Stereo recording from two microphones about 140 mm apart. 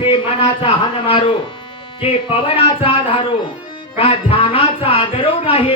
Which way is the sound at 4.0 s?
40° left (ahead or behind).